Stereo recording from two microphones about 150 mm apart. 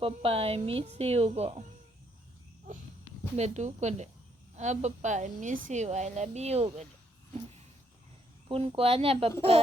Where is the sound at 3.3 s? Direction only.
50° right (ahead or behind).